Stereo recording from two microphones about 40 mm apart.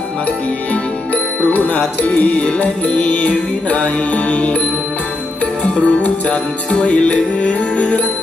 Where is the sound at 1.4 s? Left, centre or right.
Left.